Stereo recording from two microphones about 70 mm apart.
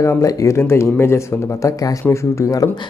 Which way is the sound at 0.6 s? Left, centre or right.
Left.